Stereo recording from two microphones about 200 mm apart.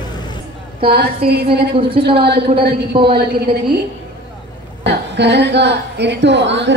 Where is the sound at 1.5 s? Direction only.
25° right (ahead or behind).